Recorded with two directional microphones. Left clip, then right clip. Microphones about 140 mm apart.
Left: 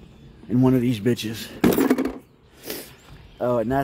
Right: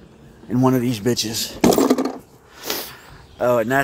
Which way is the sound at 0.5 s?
25° left (ahead or behind).